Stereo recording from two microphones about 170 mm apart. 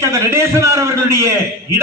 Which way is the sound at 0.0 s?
15° right (ahead or behind).